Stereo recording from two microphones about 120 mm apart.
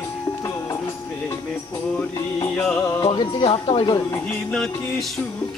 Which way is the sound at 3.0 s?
50° left (ahead or behind).